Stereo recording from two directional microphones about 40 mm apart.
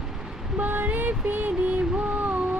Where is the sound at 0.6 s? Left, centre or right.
Right.